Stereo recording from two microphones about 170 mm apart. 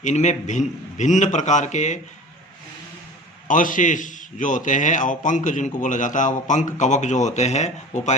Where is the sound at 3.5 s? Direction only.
50° left (ahead or behind).